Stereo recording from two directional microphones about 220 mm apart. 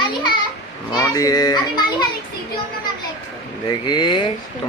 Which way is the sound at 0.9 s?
15° left (ahead or behind).